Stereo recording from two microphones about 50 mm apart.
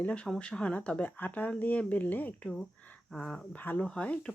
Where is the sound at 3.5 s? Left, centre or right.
Left.